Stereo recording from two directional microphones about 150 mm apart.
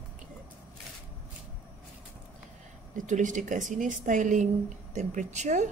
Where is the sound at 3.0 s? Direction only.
55° right (ahead or behind).